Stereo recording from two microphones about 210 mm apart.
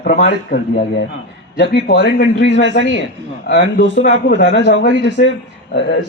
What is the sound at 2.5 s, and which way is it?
A man's voice, 55° left (ahead or behind).